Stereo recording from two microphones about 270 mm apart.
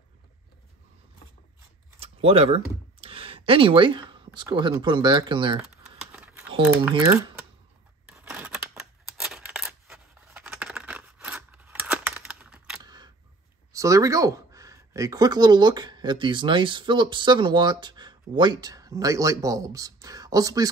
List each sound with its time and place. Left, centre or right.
2.0 s speech: right
5.6 s typing: centre
6.6 s speech: centre
8.1 s scissors: centre
9.1 s a sound: centre
12.8 s single-lens reflex camera: centre
13.7 s speech: centre